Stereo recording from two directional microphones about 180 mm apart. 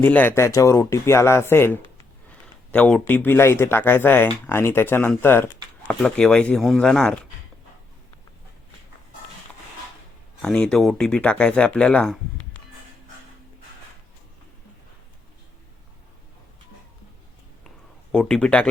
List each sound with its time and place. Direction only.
0.0 s speech: 10° left (ahead or behind)
2.3 s a sound: 5° left (ahead or behind)
3.0 s speech: 10° left (ahead or behind)
10.4 s speech: 5° left (ahead or behind)
18.1 s speech: 5° left (ahead or behind)